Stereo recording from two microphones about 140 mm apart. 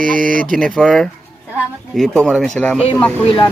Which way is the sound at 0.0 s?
75° right (ahead or behind).